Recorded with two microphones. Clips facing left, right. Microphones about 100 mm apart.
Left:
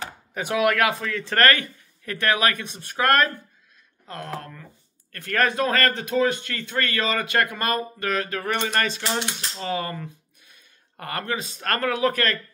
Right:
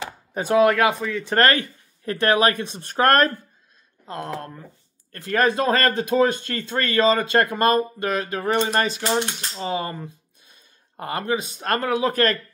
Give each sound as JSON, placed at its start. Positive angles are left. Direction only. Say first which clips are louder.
{"t": 0.3, "sound": "speech", "louder": "right 5 dB", "side_deg": -30}
{"t": 4.0, "sound": "speech", "louder": "right 3 dB", "side_deg": -25}
{"t": 6.1, "sound": "speech", "louder": "right 3 dB", "side_deg": -35}